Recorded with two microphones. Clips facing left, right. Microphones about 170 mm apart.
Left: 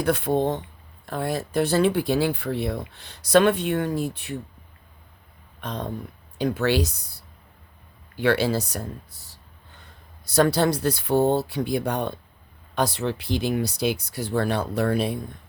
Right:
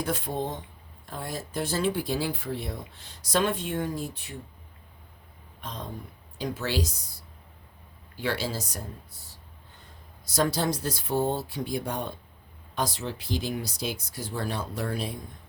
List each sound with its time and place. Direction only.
0.0 s speech: 65° left (ahead or behind)
5.5 s speech: 65° left (ahead or behind)
9.1 s speech: 80° left
10.2 s speech: 65° left (ahead or behind)